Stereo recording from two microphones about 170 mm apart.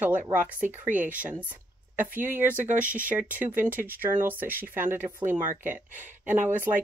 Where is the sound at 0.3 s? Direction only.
10° right (ahead or behind).